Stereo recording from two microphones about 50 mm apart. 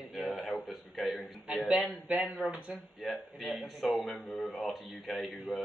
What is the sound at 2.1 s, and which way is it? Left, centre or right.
Speech, right.